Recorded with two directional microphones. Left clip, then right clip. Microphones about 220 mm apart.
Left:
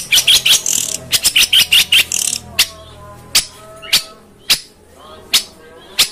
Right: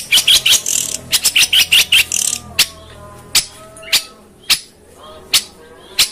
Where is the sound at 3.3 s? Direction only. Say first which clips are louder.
Left 1 dB; centre (ahead or behind).